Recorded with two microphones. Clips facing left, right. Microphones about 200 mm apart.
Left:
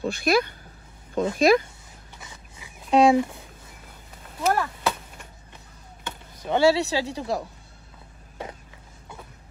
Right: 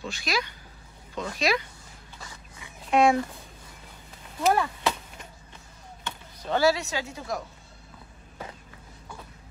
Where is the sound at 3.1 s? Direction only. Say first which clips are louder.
Left 5 dB; 15° left (ahead or behind).